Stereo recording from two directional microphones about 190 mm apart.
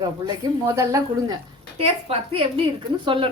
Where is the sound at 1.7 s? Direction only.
30° right (ahead or behind).